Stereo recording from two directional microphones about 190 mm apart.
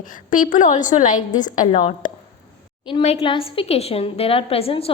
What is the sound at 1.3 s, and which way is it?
A woman's voice, 20° left (ahead or behind).